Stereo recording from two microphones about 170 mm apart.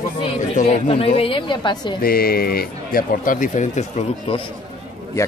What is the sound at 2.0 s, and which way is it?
Speech, 60° left (ahead or behind).